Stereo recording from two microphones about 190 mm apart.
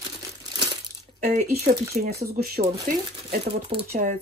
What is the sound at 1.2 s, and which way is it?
Speech, 40° right (ahead or behind).